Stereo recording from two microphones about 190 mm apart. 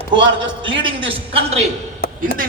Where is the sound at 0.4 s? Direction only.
75° right (ahead or behind).